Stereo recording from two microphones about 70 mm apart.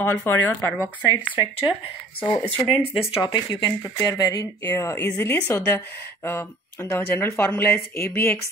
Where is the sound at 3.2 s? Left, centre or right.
Left.